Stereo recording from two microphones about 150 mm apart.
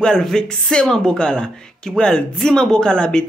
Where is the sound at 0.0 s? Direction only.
5° left (ahead or behind).